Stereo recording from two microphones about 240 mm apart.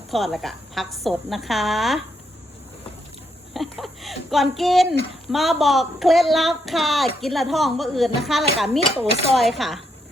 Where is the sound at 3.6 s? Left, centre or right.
Centre.